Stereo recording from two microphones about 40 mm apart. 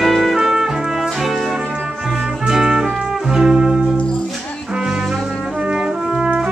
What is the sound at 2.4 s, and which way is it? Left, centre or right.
Music, centre.